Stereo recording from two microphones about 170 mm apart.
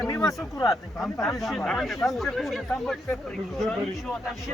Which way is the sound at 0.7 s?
Centre (ahead or behind).